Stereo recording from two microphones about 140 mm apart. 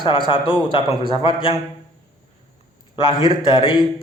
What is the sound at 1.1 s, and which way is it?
Speech, 40° left (ahead or behind).